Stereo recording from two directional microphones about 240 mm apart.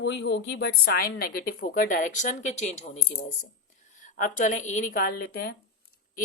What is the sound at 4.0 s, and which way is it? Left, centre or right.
Speech, left.